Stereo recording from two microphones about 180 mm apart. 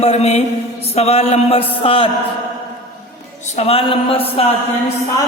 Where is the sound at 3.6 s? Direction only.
35° left (ahead or behind).